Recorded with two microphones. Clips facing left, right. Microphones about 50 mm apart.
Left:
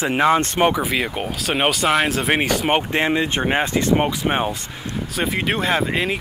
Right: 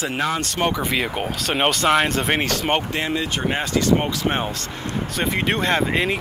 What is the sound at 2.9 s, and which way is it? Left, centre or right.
Speech, left.